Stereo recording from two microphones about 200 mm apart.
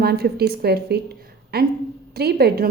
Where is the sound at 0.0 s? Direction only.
50° right (ahead or behind).